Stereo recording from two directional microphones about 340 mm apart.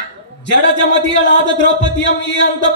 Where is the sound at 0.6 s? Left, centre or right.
Left.